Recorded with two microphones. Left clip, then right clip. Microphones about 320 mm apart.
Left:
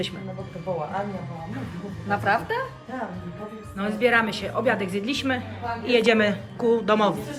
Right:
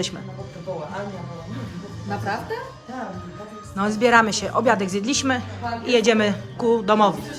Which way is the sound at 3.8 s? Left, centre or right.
Centre.